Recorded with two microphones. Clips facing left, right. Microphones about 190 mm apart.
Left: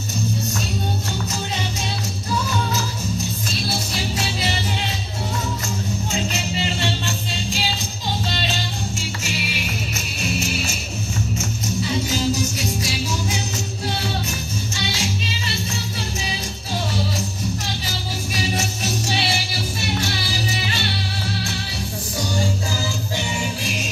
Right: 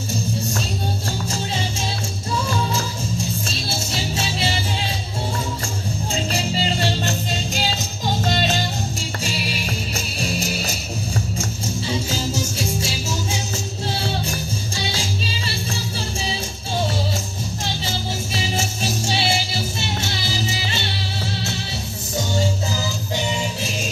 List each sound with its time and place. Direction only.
6.3 s music: 40° right (ahead or behind)
12.1 s music: 30° right (ahead or behind)
17.8 s music: 25° right (ahead or behind)